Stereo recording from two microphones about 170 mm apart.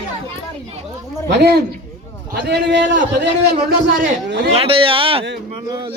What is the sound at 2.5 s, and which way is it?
A man's voice, 90° right.